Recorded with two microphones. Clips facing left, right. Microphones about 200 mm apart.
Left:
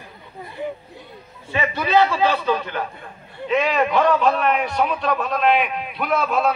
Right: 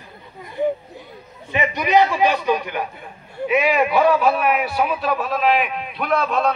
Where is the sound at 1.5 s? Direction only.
15° right (ahead or behind).